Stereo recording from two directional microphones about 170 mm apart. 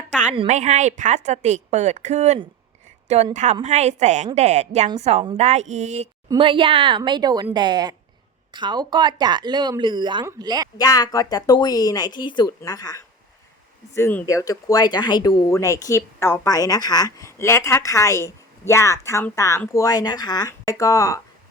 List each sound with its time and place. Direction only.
0.3 s a woman's voice: 45° right (ahead or behind)
4.4 s a sound: 40° right (ahead or behind)
6.2 s speech: 25° right (ahead or behind)
10.8 s speech: 20° left (ahead or behind)